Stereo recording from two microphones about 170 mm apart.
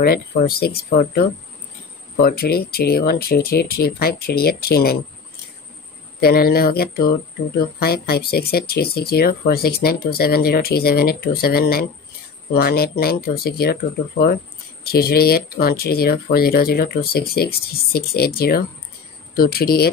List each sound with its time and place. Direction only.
0.0 s speech: 65° left (ahead or behind)
6.2 s speech: 65° left (ahead or behind)